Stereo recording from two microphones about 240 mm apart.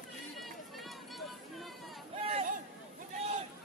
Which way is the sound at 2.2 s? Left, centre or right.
Right.